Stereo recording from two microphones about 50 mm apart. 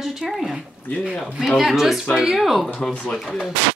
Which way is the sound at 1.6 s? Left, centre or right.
Centre.